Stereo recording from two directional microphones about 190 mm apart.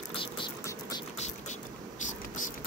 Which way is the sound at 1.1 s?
35° left (ahead or behind).